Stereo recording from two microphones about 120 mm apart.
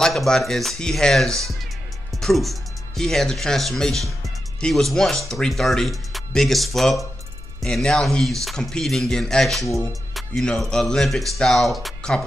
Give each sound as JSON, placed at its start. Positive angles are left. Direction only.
{"t": 0.0, "sound": "speech", "side_deg": 5}